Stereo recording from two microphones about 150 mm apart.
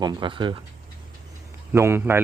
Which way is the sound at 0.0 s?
30° right (ahead or behind).